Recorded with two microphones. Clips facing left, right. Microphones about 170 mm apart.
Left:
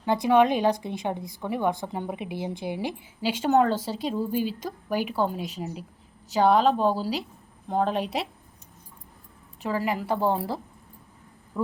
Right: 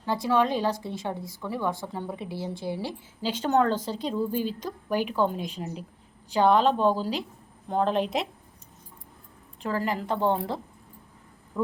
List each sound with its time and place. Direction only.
0.0 s a woman's voice: 20° left (ahead or behind); by 8.3 s 5° left (ahead or behind)
9.6 s a woman's voice: 10° left (ahead or behind)